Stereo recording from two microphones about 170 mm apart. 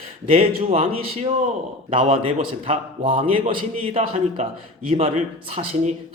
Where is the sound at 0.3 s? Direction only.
35° right (ahead or behind).